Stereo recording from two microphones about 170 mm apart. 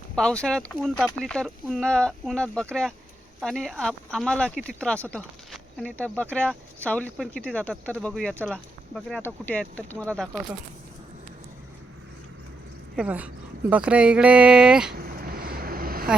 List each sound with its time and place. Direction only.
0.2 s speech: 5° left (ahead or behind)
13.0 s speech: 10° right (ahead or behind)
14.9 s vehicle: 60° right (ahead or behind)